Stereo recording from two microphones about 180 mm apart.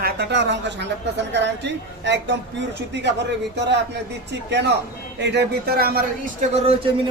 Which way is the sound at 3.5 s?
70° right (ahead or behind).